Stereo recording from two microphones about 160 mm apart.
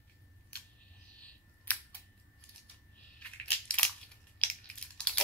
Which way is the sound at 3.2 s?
5° left (ahead or behind).